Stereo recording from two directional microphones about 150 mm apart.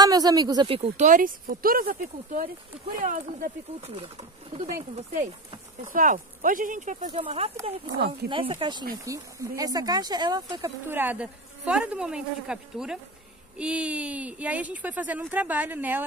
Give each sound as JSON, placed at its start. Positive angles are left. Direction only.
{"t": 0.0, "sound": "speech", "side_deg": -25}
{"t": 0.7, "sound": "speech", "side_deg": -40}
{"t": 3.0, "sound": "speech", "side_deg": -60}
{"t": 3.8, "sound": "speech", "side_deg": -40}
{"t": 5.9, "sound": "speech", "side_deg": -60}
{"t": 7.2, "sound": "speech", "side_deg": -40}
{"t": 9.0, "sound": "speech", "side_deg": -20}
{"t": 10.9, "sound": "speech", "side_deg": -10}